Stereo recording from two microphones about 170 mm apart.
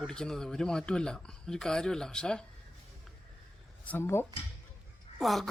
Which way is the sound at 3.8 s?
15° left (ahead or behind).